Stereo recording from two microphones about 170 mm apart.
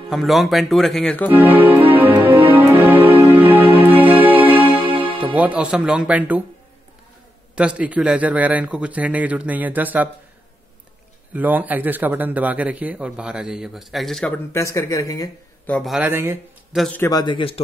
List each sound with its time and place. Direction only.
0.1 s speech: centre (ahead or behind)
1.3 s a man's voice: 10° right (ahead or behind)
2.5 s music: 10° right (ahead or behind)
5.2 s a man's voice: 10° right (ahead or behind)
7.5 s a man's voice: 5° right (ahead or behind)
11.3 s a man's voice: 10° right (ahead or behind); by 15.3 s 20° left (ahead or behind)
15.6 s a man's voice: 10° left (ahead or behind)
15.9 s a man's voice: 10° right (ahead or behind)
16.7 s speech: centre (ahead or behind)
17.0 s a man's voice: 25° left (ahead or behind)